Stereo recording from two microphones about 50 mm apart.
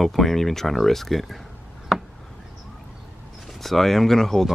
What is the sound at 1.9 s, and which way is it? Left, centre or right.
Chop, centre.